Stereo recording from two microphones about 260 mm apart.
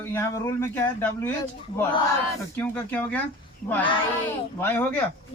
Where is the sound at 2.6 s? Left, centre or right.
Centre.